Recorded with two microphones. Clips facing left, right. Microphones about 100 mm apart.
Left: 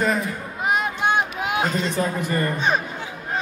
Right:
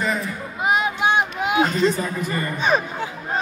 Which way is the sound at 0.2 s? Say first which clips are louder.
Right 1 dB; centre (ahead or behind).